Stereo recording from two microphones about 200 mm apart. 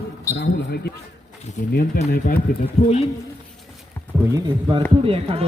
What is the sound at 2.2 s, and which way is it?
Speech, 40° left (ahead or behind).